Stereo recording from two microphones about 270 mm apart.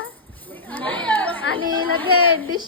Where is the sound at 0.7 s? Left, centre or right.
Centre.